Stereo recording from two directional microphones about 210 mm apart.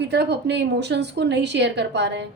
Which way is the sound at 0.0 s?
50° right (ahead or behind).